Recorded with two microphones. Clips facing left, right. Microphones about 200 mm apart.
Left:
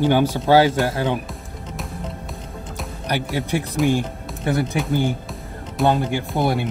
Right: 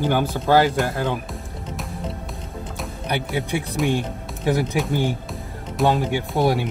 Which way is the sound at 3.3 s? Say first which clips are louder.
Left 1 dB; centre (ahead or behind).